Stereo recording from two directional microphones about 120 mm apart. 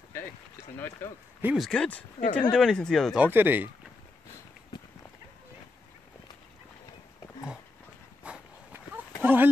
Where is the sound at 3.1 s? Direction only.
15° right (ahead or behind).